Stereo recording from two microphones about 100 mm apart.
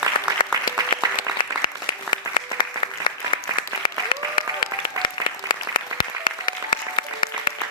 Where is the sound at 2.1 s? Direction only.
50° left (ahead or behind).